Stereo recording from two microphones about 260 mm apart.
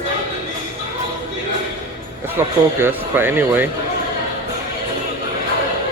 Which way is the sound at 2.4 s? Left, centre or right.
Centre.